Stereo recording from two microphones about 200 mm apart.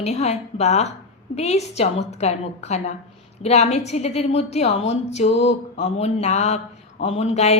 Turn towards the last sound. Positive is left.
turn(degrees=35)  # may be behind; listen again after turning